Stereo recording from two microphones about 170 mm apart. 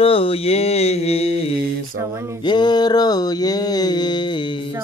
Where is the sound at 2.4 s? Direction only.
25° left (ahead or behind).